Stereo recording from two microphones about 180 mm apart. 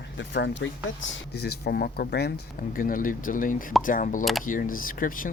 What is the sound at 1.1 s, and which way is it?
Speech, 65° left (ahead or behind).